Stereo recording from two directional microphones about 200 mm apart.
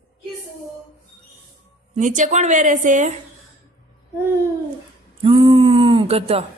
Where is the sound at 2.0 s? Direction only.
40° right (ahead or behind).